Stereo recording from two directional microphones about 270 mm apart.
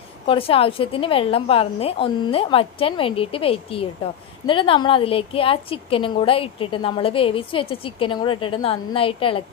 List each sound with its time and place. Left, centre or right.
0.3 s a woman's voice: left